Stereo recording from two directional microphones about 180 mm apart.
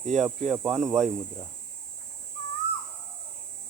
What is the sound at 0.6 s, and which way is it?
Speech, centre (ahead or behind).